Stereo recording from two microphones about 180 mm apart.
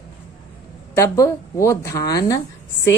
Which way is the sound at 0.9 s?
15° left (ahead or behind).